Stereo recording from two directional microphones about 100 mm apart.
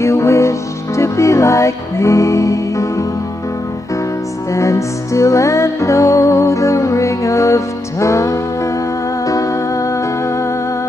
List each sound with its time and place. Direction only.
0.0 s music: 25° left (ahead or behind)
4.5 s music: 30° left (ahead or behind)